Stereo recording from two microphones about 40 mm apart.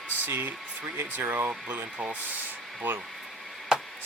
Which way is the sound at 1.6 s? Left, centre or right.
Right.